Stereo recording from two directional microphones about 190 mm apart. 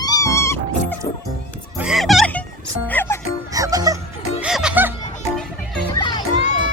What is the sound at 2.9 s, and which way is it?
Music, 10° left (ahead or behind).